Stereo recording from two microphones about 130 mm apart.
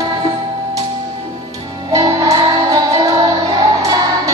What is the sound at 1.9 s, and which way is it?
Music, 25° right (ahead or behind).